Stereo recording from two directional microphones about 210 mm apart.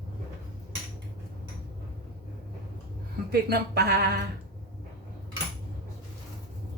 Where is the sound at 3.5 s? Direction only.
50° right (ahead or behind).